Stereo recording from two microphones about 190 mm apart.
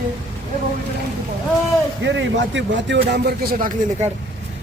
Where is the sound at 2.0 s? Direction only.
75° right (ahead or behind); by 3.7 s 50° right (ahead or behind).